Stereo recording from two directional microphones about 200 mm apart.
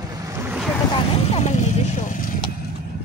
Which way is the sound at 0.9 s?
35° left (ahead or behind).